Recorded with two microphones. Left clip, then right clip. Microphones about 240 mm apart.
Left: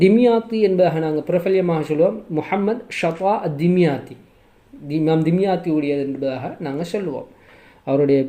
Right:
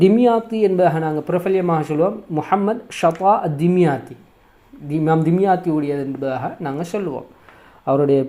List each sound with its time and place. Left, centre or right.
0.0 s speech: centre